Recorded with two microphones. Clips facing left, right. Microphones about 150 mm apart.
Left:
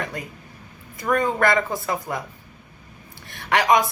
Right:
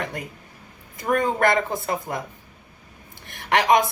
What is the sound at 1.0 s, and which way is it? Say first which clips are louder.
Speech: even; 20° right (ahead or behind).